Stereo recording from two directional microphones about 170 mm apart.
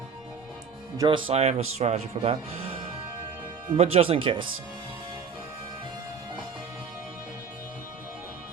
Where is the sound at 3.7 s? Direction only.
35° right (ahead or behind).